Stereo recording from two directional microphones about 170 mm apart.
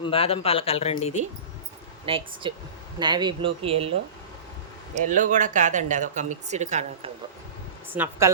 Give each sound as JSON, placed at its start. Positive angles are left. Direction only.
{"t": 0.0, "sound": "speech", "side_deg": 35}
{"t": 2.0, "sound": "speech", "side_deg": -30}
{"t": 4.9, "sound": "speech", "side_deg": -50}
{"t": 7.9, "sound": "speech", "side_deg": -10}